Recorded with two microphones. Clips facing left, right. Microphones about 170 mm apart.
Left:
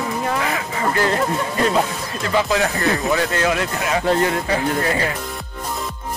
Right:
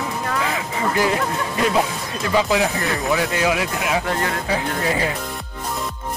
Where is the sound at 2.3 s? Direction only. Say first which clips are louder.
Even; 15° right (ahead or behind).